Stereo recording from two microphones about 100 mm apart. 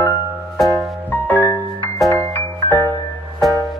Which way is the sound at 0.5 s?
Centre (ahead or behind).